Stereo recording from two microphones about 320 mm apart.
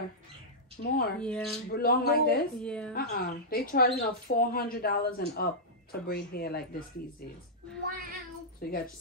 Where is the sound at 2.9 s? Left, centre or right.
Left.